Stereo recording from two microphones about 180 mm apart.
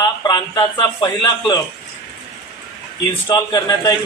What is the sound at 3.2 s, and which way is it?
Speech, 20° left (ahead or behind).